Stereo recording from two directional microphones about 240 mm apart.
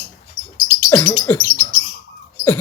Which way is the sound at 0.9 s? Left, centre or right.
Centre.